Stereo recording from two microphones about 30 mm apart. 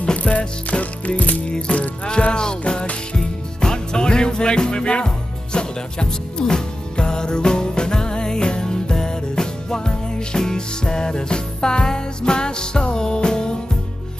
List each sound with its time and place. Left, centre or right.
0.0 s music: left
1.7 s music: left